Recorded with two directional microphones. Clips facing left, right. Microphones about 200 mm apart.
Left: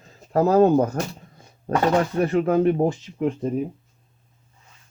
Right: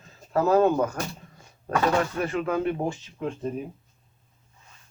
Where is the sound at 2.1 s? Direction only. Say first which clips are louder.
Left 7 dB; 35° left (ahead or behind).